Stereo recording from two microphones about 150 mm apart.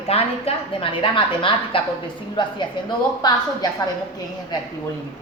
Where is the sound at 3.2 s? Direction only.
25° left (ahead or behind).